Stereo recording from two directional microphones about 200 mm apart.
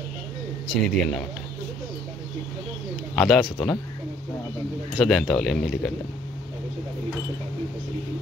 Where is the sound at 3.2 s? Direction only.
Centre (ahead or behind).